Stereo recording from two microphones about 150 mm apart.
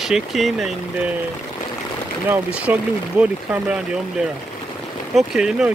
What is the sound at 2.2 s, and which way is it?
Speech, 10° right (ahead or behind).